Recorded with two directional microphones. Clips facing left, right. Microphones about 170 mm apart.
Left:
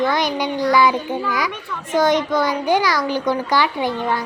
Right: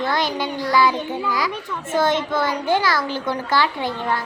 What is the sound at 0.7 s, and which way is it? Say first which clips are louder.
Child singing: left 2 dB; 20° left (ahead or behind).